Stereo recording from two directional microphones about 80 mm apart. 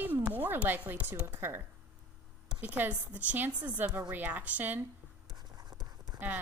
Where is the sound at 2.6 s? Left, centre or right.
Right.